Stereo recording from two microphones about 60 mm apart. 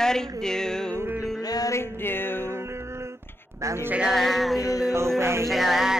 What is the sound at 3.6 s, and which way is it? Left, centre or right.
Bleat, right.